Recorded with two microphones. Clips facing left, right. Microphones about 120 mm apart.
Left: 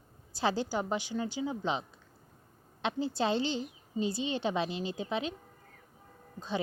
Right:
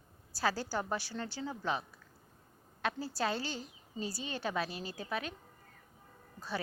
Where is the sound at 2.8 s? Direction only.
20° left (ahead or behind).